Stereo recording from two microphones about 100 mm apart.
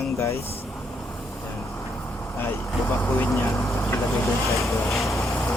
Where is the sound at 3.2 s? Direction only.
25° left (ahead or behind).